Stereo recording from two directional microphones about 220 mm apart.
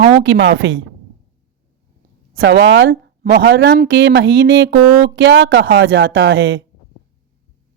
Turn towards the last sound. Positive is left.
turn(degrees=-60)  # may be behind; listen again after turning